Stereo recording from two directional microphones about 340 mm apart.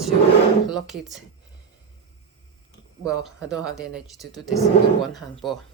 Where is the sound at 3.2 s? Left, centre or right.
Centre.